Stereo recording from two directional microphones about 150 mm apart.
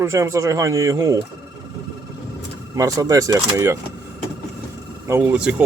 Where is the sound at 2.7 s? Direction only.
25° right (ahead or behind).